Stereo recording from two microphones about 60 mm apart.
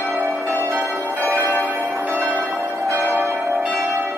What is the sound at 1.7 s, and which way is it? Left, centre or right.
Change ringing, right.